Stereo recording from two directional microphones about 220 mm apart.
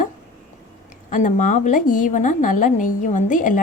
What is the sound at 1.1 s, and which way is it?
Speech, 35° left (ahead or behind).